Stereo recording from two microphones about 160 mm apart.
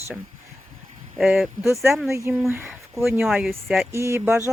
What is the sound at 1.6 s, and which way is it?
Speech, 15° right (ahead or behind).